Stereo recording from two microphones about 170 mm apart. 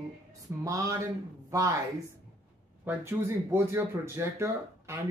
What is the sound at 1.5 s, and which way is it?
Speech, 20° right (ahead or behind).